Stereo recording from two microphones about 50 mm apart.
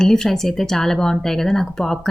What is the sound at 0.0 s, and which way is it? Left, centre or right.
A woman's voice, centre.